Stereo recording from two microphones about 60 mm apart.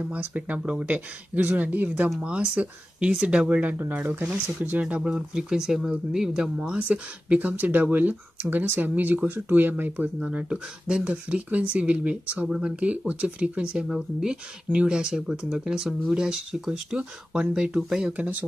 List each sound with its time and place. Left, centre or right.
0.0 s speech: right
5.1 s speech: centre
12.4 s speech: centre
12.8 s speech: right
18.1 s speech: right